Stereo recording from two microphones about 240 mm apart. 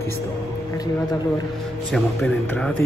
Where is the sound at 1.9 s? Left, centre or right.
Centre.